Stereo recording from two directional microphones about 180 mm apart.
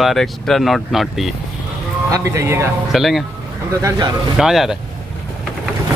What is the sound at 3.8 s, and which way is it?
Speech, 20° right (ahead or behind).